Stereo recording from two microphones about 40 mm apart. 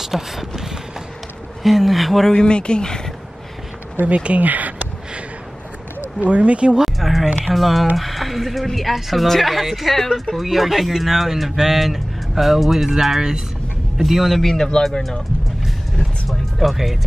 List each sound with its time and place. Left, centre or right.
0.0 s speech: centre
2.3 s speech: left
4.0 s speech: right
6.2 s speech: right
6.8 s a sound: centre
7.4 s speech: centre
14.4 s speech: centre
15.6 s music: centre